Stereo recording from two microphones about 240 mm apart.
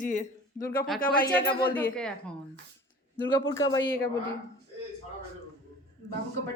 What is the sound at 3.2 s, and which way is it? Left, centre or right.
Speech, centre.